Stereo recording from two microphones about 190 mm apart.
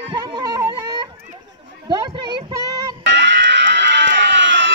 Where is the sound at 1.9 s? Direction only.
20° right (ahead or behind).